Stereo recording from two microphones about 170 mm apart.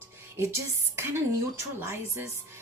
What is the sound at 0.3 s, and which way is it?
A woman's voice, 15° right (ahead or behind).